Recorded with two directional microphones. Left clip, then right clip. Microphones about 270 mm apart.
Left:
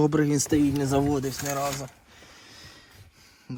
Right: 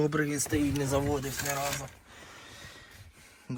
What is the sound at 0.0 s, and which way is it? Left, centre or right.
Speech, centre.